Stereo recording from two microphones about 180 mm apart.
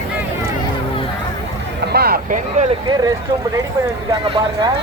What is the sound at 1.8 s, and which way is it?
Vehicle, 60° right (ahead or behind).